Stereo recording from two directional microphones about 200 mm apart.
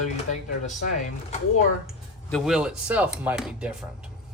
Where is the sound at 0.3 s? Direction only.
35° left (ahead or behind).